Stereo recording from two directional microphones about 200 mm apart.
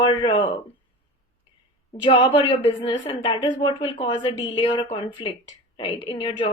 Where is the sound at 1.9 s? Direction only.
30° left (ahead or behind).